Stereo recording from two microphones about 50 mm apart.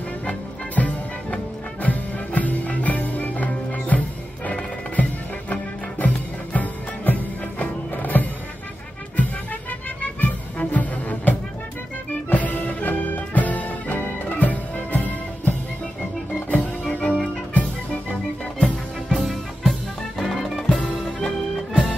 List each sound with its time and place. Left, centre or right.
0.3 s music: left
5.5 s music: left; by 20.6 s centre
20.6 s music: centre